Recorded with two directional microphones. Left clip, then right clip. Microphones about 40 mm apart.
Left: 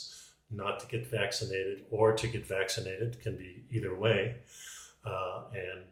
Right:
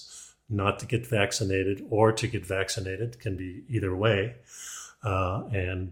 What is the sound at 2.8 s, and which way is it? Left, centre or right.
Speech, right.